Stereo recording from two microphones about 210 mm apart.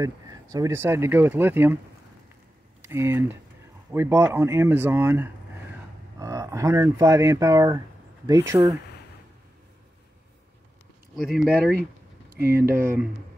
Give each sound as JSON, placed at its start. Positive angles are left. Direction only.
{"t": 0.0, "sound": "speech", "side_deg": -15}
{"t": 2.8, "sound": "speech", "side_deg": -10}
{"t": 11.1, "sound": "speech", "side_deg": 0}
{"t": 11.5, "sound": "speech", "side_deg": -45}